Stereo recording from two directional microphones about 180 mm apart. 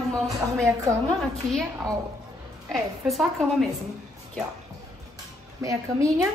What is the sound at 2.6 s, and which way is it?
A woman's voice, centre (ahead or behind).